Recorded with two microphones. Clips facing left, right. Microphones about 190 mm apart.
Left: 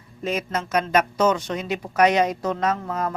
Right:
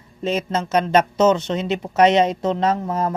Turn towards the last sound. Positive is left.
turn(degrees=-25)  # may be behind; listen again after turning